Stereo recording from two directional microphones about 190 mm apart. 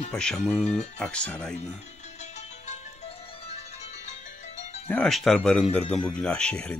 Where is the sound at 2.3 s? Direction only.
35° left (ahead or behind).